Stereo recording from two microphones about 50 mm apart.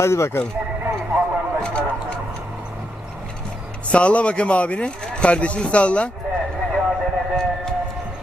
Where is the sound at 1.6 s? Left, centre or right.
Left.